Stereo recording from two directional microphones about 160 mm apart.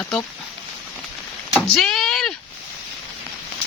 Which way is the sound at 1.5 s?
Centre (ahead or behind).